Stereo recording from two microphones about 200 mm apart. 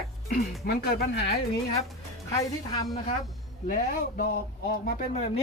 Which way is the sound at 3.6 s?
50° left (ahead or behind).